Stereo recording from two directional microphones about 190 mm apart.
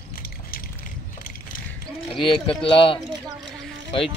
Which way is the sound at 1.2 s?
45° left (ahead or behind).